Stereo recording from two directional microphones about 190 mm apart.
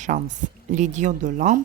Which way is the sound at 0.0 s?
40° right (ahead or behind).